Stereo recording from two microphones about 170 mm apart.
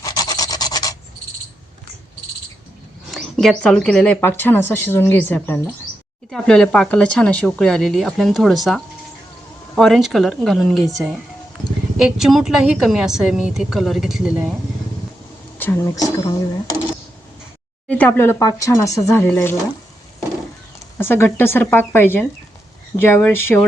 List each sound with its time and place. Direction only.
0.0 s filing: 20° left (ahead or behind)
3.1 s a woman's voice: centre (ahead or behind)
15.5 s speech: 10° left (ahead or behind)
17.8 s speech: 10° left (ahead or behind)
21.0 s speech: 15° left (ahead or behind)